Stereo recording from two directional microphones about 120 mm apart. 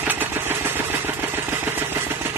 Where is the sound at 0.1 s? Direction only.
15° right (ahead or behind).